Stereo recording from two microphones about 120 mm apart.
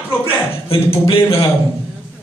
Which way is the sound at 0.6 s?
50° left (ahead or behind).